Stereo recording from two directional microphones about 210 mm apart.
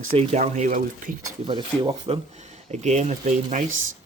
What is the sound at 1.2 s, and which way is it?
Speech, 20° right (ahead or behind).